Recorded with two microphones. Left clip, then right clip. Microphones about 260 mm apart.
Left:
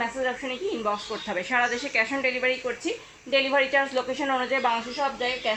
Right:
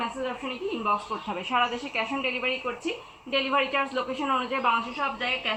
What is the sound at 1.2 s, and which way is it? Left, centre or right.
A woman's voice, centre.